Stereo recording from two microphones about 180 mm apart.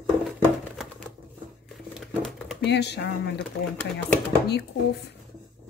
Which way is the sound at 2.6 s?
70° left (ahead or behind).